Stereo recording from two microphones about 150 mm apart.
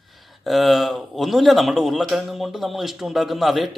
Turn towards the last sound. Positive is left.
turn(degrees=0)  # may be behind; listen again after turning